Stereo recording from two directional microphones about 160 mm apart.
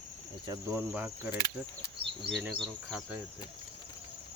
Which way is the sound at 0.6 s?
15° right (ahead or behind).